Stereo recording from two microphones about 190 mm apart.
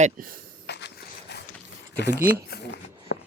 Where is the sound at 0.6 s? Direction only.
60° left (ahead or behind).